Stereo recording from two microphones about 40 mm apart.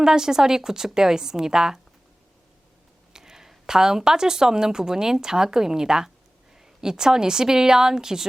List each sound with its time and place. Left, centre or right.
0.0 s a woman's voice: centre
3.1 s a woman's voice: centre